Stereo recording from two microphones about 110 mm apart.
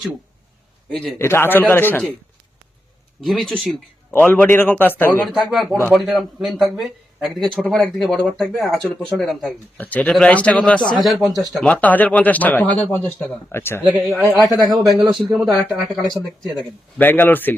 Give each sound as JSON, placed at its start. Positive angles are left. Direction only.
{"t": 1.2, "sound": "a man's voice", "side_deg": 20}
{"t": 3.2, "sound": "a man's voice", "side_deg": 0}
{"t": 4.1, "sound": "speech", "side_deg": 15}
{"t": 5.2, "sound": "a man's voice", "side_deg": 0}
{"t": 9.7, "sound": "a man's voice", "side_deg": 15}
{"t": 11.7, "sound": "speech", "side_deg": 15}
{"t": 13.9, "sound": "a man's voice", "side_deg": 0}
{"t": 17.0, "sound": "speech", "side_deg": 15}